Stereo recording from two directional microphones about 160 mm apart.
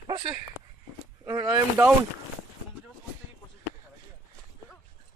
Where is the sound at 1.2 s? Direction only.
25° right (ahead or behind).